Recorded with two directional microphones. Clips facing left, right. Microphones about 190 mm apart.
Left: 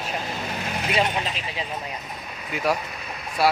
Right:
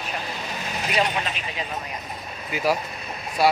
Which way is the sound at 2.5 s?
Centre (ahead or behind).